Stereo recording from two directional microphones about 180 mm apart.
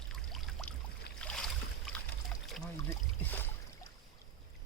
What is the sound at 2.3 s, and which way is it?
Pour, 5° left (ahead or behind).